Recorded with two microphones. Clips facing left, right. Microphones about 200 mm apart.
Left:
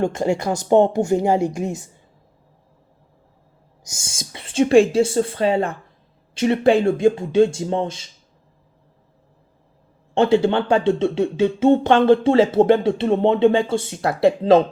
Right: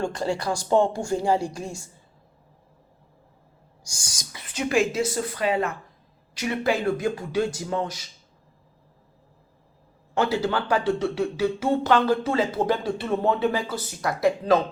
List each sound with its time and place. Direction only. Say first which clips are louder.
0.0 s speech: left 6 dB; 25° left (ahead or behind)
3.8 s speech: left 7 dB; 25° left (ahead or behind)
10.2 s speech: left 8 dB; 25° left (ahead or behind)